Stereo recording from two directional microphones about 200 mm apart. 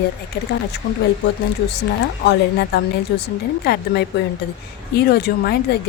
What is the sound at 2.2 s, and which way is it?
A woman's voice, 55° left (ahead or behind).